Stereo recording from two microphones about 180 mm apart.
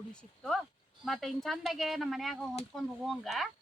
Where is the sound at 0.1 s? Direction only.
5° left (ahead or behind).